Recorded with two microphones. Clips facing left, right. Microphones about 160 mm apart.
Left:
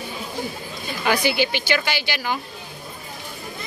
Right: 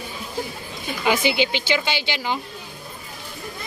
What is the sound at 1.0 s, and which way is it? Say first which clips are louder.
Speech: even; 20° right (ahead or behind).